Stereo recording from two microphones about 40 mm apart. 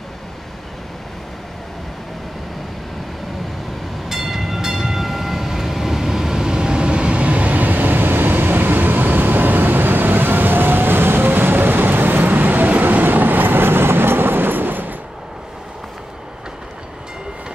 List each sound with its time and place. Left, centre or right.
4.1 s train: centre; by 15.0 s right